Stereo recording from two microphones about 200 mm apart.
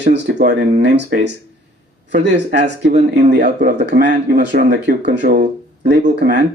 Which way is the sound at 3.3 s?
45° right (ahead or behind).